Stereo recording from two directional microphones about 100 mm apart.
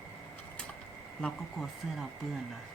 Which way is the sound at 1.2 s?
Centre (ahead or behind).